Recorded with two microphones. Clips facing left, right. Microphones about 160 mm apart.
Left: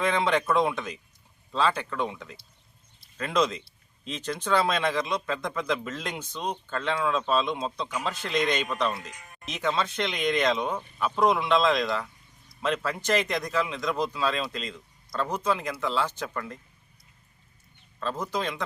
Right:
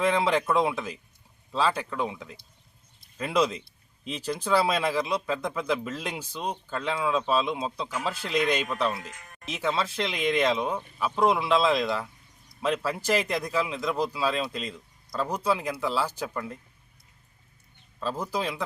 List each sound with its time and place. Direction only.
0.0 s speech: 5° right (ahead or behind)
18.0 s speech: 5° right (ahead or behind)